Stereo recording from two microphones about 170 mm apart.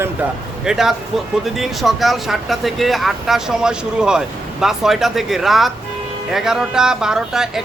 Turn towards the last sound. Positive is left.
turn(degrees=-5)  # may be behind; listen again after turning